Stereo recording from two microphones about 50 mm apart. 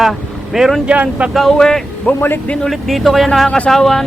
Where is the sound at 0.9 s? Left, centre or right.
Right.